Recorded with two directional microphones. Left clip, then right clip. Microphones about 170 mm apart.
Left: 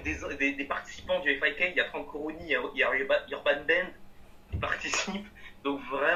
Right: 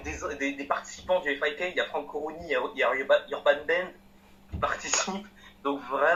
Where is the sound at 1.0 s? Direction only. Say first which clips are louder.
Right 1 dB; 15° left (ahead or behind).